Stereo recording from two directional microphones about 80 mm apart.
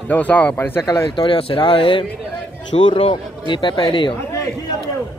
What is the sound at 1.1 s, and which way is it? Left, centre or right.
Speech, left.